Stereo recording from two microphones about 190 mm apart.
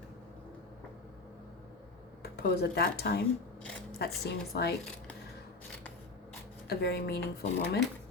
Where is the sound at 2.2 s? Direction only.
55° left (ahead or behind).